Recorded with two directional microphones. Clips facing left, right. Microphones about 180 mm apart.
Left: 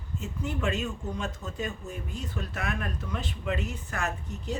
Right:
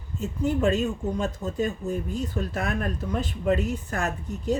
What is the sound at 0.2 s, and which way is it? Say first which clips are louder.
Speech: right 9 dB; 35° right (ahead or behind).